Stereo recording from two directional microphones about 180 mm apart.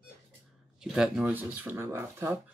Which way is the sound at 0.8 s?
5° right (ahead or behind).